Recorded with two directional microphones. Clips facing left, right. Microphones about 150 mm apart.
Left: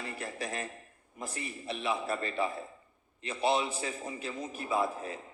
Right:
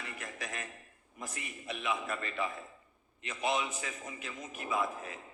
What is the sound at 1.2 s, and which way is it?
A man's voice, 30° left (ahead or behind).